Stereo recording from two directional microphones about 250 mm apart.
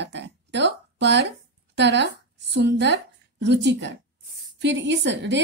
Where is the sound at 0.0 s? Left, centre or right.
Right.